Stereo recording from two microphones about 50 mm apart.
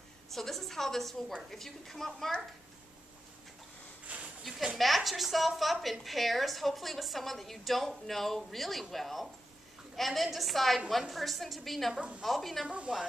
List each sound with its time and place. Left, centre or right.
0.3 s a woman's voice: centre
4.1 s a sound: right
4.7 s a woman's voice: centre
11.9 s a woman's voice: right
12.2 s a woman's voice: centre
12.6 s a woman's voice: right